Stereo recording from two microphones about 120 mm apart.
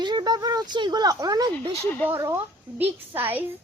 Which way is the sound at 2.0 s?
20° right (ahead or behind).